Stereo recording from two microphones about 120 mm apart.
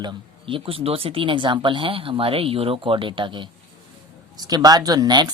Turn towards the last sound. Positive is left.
turn(degrees=-35)  # may be behind; listen again after turning